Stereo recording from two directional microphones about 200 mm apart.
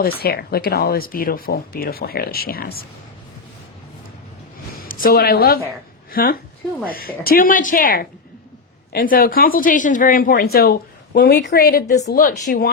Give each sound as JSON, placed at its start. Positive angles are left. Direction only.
{"t": 0.2, "sound": "speech", "side_deg": 50}
{"t": 4.8, "sound": "a woman's voice", "side_deg": 45}